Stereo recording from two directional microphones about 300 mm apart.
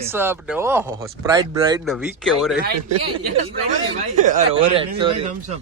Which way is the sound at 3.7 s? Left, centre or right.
Right.